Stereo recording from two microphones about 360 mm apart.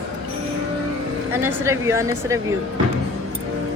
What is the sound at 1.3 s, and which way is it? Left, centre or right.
A woman's voice, centre.